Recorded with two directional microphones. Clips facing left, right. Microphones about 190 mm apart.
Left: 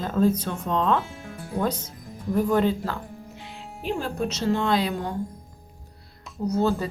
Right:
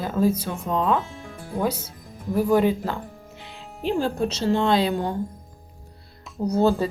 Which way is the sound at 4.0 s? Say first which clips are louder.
Right 5 dB; 30° right (ahead or behind).